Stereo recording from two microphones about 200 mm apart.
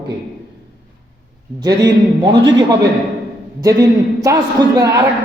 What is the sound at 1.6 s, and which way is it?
A man's voice, 20° right (ahead or behind).